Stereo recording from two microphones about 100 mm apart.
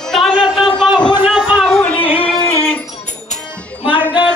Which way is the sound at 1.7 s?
5° left (ahead or behind).